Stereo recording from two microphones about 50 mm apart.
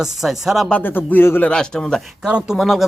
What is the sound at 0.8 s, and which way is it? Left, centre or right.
Speech, left.